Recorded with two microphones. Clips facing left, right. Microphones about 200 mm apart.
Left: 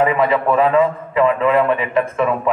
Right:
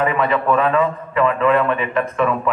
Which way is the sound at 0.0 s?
25° left (ahead or behind).